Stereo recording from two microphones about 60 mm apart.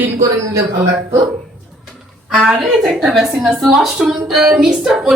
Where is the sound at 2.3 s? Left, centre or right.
Centre.